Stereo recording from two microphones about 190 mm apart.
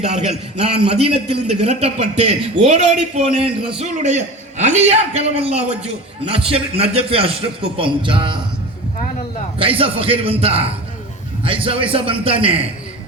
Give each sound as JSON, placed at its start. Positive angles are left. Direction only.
{"t": 0.5, "sound": "a man's voice", "side_deg": -30}
{"t": 9.6, "sound": "a man's voice", "side_deg": -30}